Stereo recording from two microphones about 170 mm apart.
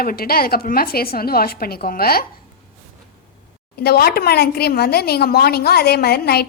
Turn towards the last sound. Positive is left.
turn(degrees=70)  # may be behind; listen again after turning